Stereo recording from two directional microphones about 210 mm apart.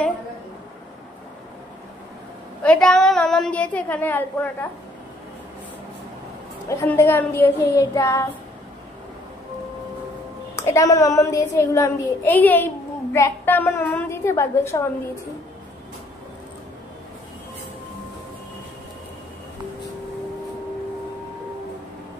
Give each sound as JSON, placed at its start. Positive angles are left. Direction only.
{"t": 2.6, "sound": "a woman's voice", "side_deg": 5}
{"t": 6.7, "sound": "a woman's voice", "side_deg": 15}
{"t": 10.5, "sound": "a woman's voice", "side_deg": 15}